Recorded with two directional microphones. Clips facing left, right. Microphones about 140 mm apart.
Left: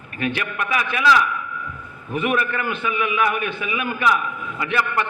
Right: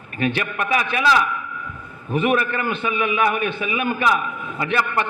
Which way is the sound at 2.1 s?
30° right (ahead or behind).